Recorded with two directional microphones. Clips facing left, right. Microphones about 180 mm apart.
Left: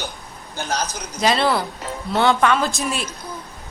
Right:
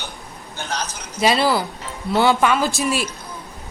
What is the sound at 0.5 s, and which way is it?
Speech, 40° left (ahead or behind).